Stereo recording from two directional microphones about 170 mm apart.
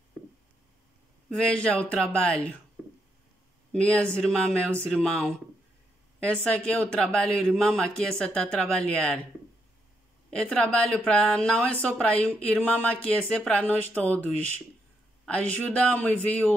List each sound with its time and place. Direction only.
1.3 s speech: 5° left (ahead or behind)
2.8 s a sound: 5° right (ahead or behind)
3.7 s speech: 5° left (ahead or behind)
10.3 s a man's voice: 5° left (ahead or behind)